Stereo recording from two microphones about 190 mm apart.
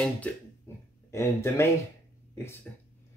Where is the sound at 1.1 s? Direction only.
15° left (ahead or behind).